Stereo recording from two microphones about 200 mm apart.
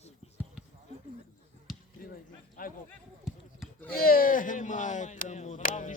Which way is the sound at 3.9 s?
45° left (ahead or behind).